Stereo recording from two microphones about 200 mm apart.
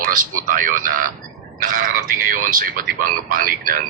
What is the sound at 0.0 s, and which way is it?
Speech, 45° right (ahead or behind).